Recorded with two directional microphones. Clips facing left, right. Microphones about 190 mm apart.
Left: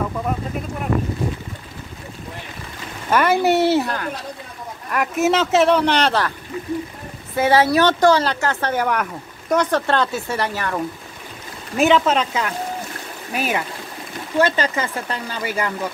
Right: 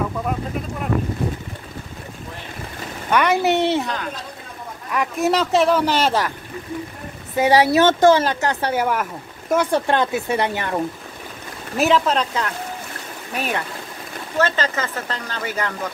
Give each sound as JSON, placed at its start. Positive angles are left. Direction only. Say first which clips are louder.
{"t": 3.1, "sound": "speech", "louder": "left 1 dB", "side_deg": 5}
{"t": 7.3, "sound": "speech", "louder": "right 1 dB", "side_deg": -15}
{"t": 11.7, "sound": "speech", "louder": "left 2 dB", "side_deg": 0}